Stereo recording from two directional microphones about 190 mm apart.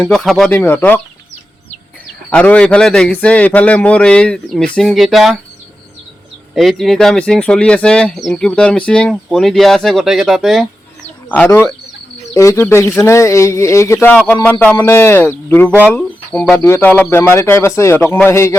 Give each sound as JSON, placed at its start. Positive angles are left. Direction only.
{"t": 0.0, "sound": "speech", "side_deg": 0}
{"t": 2.3, "sound": "speech", "side_deg": 5}
{"t": 6.5, "sound": "speech", "side_deg": 0}
{"t": 11.3, "sound": "speech", "side_deg": 10}